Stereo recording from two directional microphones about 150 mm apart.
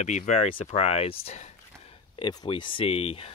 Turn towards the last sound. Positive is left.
turn(degrees=40)  # may be behind; listen again after turning